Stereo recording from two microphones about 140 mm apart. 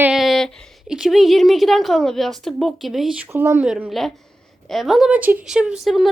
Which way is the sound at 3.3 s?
15° right (ahead or behind).